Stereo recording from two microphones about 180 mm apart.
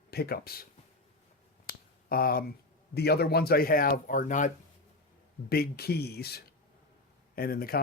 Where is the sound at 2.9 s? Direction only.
60° left (ahead or behind); by 4.5 s 45° left (ahead or behind).